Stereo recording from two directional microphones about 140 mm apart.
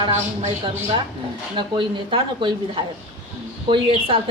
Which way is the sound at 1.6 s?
35° right (ahead or behind).